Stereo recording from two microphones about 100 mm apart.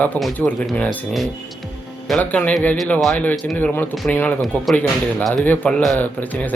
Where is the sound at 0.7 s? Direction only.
15° left (ahead or behind).